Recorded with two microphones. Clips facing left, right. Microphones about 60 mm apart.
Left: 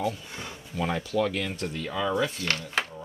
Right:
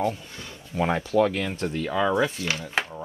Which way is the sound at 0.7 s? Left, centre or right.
Right.